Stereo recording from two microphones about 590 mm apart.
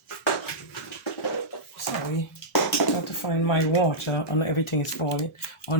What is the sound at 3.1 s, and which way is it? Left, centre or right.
Speech, left.